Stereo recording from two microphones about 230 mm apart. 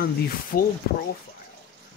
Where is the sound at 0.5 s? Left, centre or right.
Left.